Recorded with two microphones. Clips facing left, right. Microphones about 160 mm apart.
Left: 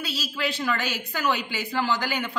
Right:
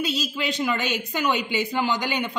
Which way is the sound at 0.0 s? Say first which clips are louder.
Right 3 dB; 20° right (ahead or behind).